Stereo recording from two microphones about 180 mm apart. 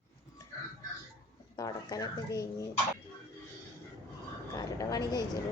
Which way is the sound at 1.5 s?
20° left (ahead or behind).